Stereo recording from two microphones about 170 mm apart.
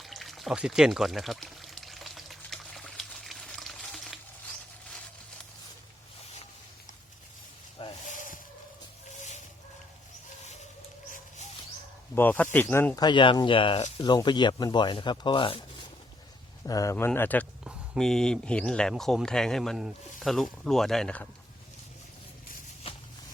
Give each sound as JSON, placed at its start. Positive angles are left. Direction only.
{"t": 0.0, "sound": "pour", "side_deg": 0}
{"t": 8.0, "sound": "a sound", "side_deg": 50}
{"t": 12.1, "sound": "speech", "side_deg": 10}
{"t": 13.0, "sound": "speech", "side_deg": 25}
{"t": 16.6, "sound": "speech", "side_deg": 20}
{"t": 17.6, "sound": "speech", "side_deg": 0}
{"t": 22.8, "sound": "a sound", "side_deg": 35}